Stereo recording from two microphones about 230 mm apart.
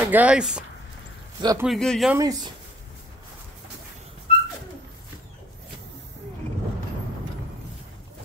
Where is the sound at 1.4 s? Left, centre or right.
Centre.